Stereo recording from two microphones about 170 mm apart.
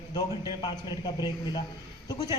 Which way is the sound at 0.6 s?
25° left (ahead or behind).